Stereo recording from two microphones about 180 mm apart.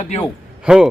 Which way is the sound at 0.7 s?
5° right (ahead or behind).